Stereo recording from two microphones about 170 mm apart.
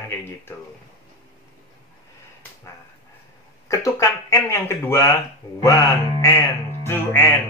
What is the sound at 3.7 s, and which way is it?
Speech, 20° left (ahead or behind).